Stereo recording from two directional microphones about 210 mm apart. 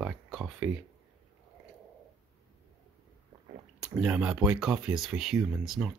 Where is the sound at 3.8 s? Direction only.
5° right (ahead or behind).